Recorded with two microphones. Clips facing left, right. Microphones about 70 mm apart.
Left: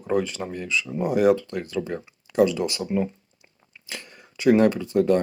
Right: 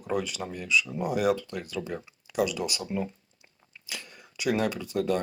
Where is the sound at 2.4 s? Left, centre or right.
Left.